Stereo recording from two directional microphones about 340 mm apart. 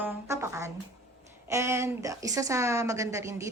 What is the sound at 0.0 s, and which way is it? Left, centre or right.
Music, centre.